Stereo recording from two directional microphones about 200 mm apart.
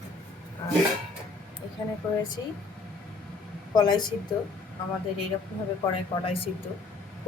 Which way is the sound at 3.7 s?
20° left (ahead or behind).